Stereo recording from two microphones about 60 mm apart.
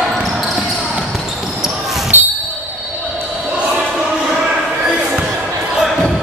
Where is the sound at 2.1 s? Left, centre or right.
Right.